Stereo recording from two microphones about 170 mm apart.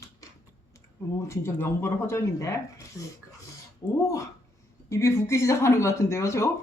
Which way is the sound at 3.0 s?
5° right (ahead or behind).